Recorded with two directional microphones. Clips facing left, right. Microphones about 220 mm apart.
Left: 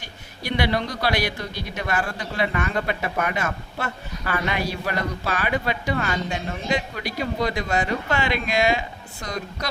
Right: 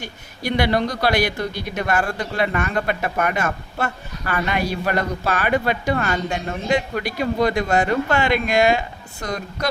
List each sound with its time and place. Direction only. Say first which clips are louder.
0.4 s speech: right 4 dB; 50° right (ahead or behind)